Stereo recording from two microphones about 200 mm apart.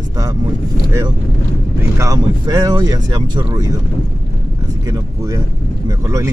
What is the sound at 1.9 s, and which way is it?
Speech, 15° right (ahead or behind).